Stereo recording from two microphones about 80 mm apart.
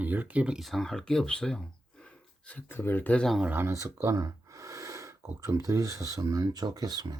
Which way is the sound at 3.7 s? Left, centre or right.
Right.